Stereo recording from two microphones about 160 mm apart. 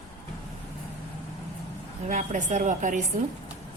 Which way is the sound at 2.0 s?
50° right (ahead or behind).